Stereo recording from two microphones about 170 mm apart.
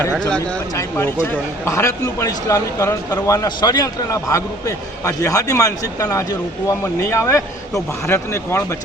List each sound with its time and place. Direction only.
0.8 s a man's voice: 15° left (ahead or behind)